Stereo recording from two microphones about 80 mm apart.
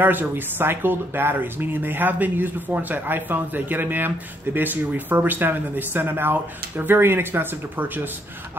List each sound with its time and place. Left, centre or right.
0.0 s speech: right